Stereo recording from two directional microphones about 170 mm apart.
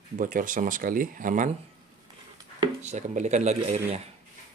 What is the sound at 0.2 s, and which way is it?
Speech, 50° right (ahead or behind).